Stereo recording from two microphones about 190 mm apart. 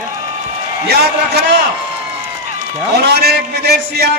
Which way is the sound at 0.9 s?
60° right (ahead or behind).